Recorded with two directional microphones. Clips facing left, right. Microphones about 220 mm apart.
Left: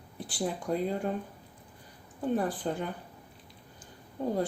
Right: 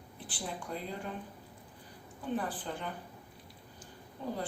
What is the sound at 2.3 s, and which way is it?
Speech, 45° left (ahead or behind).